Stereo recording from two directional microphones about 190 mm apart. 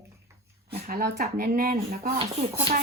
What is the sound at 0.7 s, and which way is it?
A woman's voice, 55° right (ahead or behind).